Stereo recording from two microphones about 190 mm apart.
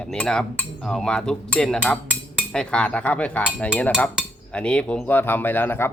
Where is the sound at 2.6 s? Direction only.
5° left (ahead or behind).